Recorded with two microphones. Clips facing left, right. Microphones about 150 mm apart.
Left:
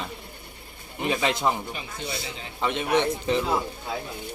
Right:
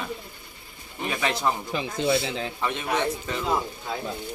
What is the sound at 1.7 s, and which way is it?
Speech, 75° right (ahead or behind).